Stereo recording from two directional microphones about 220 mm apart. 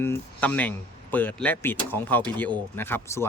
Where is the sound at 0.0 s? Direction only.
10° left (ahead or behind).